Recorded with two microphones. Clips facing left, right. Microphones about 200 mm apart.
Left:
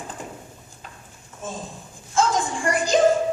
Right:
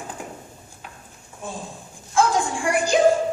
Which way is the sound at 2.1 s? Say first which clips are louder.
Right 2 dB; 15° right (ahead or behind).